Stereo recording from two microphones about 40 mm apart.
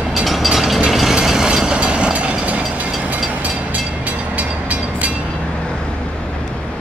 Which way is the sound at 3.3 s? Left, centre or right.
Right.